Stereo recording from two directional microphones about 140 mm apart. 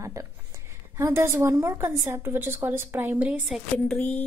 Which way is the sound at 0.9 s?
20° right (ahead or behind).